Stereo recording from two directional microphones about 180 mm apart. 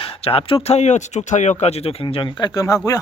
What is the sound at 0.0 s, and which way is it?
Speech, 30° left (ahead or behind).